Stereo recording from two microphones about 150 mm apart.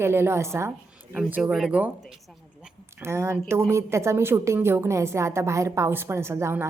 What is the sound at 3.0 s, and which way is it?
A woman's voice, 15° right (ahead or behind).